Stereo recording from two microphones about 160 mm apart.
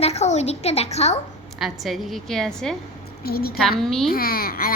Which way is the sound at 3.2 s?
70° left (ahead or behind).